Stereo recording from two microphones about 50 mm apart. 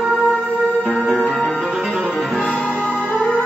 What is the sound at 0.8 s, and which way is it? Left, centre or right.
Music, right.